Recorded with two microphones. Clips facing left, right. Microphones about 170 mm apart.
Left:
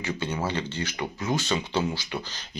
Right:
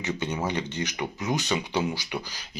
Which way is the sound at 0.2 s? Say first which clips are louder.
Even; 15° right (ahead or behind).